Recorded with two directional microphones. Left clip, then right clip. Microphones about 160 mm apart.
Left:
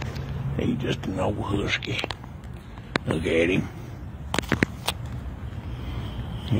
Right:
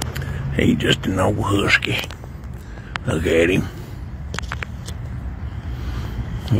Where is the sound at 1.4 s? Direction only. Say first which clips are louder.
Right 10 dB; 30° right (ahead or behind).